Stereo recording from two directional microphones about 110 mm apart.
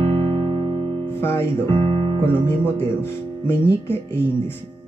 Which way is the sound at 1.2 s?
20° left (ahead or behind).